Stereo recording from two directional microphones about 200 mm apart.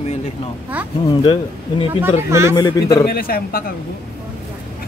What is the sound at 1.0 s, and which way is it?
Speech, 25° left (ahead or behind).